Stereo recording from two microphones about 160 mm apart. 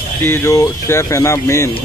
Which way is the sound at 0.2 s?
15° left (ahead or behind).